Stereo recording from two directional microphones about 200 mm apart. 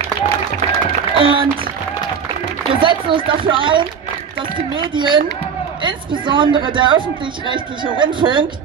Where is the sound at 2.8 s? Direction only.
25° right (ahead or behind).